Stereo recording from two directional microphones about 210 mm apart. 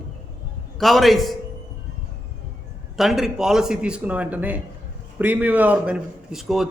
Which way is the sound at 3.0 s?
Centre (ahead or behind).